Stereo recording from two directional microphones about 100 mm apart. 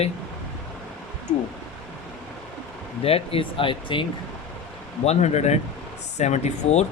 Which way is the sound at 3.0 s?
75° left (ahead or behind).